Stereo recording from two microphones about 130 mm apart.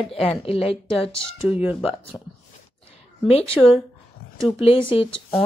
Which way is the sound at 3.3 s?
50° left (ahead or behind).